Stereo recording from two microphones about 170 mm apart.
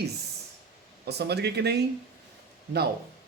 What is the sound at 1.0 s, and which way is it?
Speech, 75° right (ahead or behind).